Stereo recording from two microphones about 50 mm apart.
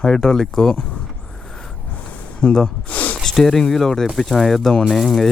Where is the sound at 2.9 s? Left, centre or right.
Left.